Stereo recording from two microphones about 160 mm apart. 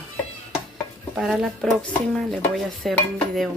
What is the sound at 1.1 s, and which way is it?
Speech, 5° right (ahead or behind).